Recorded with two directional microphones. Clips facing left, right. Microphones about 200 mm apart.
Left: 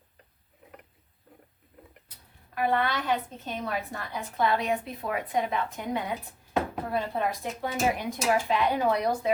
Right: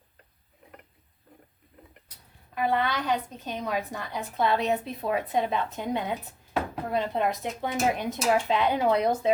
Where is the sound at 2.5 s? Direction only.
20° right (ahead or behind).